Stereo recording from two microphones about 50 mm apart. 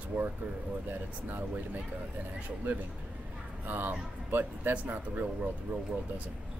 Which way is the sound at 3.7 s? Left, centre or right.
Right.